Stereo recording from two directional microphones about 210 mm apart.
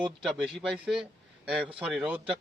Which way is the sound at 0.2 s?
Centre (ahead or behind).